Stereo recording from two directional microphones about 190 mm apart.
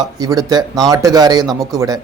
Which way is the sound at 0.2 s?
20° right (ahead or behind).